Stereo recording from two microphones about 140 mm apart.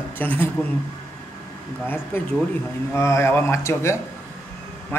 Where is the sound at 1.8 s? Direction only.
15° left (ahead or behind).